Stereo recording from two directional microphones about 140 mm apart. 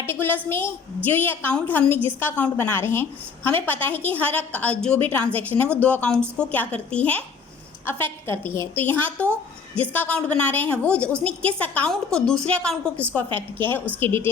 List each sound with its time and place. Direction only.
0.0 s a woman's voice: 15° left (ahead or behind)
13.2 s a woman's voice: 40° right (ahead or behind)
14.0 s a woman's voice: 15° left (ahead or behind)